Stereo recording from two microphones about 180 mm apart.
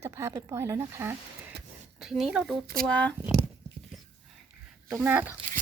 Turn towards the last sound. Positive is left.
turn(degrees=-10)  # may be behind; listen again after turning